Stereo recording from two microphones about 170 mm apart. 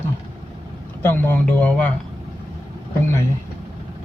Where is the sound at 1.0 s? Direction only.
10° left (ahead or behind).